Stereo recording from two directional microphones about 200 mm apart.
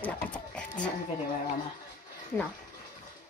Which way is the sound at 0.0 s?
5° left (ahead or behind).